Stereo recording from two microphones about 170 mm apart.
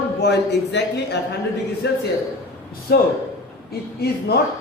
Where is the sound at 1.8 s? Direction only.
80° left.